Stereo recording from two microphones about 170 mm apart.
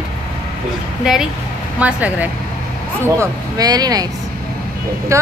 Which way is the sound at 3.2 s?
20° right (ahead or behind).